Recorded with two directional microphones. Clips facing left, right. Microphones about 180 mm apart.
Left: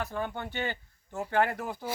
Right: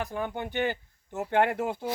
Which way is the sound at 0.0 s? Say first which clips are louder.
Right 2 dB; 15° right (ahead or behind).